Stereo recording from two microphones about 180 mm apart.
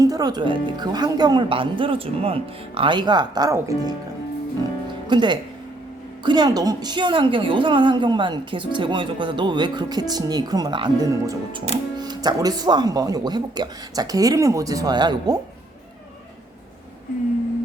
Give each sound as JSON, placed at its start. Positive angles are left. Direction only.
{"t": 0.0, "sound": "a woman's voice", "side_deg": -20}
{"t": 5.0, "sound": "a woman's voice", "side_deg": -25}